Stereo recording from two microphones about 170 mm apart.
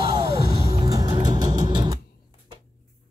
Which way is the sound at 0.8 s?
20° right (ahead or behind).